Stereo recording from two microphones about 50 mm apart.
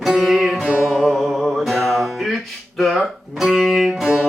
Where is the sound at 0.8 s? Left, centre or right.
Centre.